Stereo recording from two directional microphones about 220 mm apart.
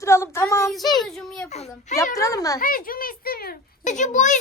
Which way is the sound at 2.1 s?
15° left (ahead or behind).